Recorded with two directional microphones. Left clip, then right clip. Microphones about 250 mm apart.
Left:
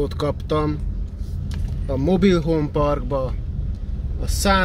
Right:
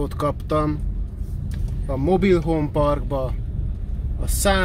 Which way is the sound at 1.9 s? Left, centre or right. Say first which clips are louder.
Even; left.